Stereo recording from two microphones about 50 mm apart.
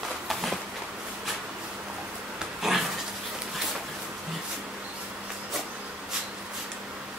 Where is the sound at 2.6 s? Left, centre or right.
Centre.